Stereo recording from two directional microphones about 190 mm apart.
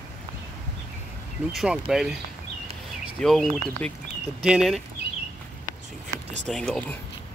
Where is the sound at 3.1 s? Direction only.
Centre (ahead or behind).